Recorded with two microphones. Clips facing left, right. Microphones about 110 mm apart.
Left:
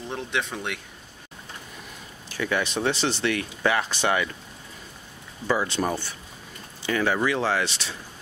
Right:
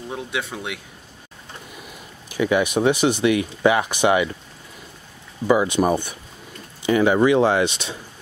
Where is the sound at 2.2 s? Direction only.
15° right (ahead or behind).